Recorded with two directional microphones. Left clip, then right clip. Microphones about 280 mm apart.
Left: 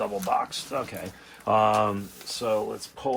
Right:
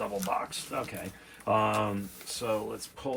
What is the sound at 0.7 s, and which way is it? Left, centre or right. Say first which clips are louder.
Speech: left 3 dB; centre.